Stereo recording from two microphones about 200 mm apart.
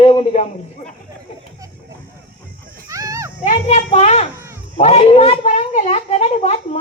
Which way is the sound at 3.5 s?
35° left (ahead or behind).